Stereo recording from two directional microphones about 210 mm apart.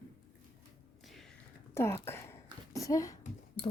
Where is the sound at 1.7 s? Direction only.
10° left (ahead or behind).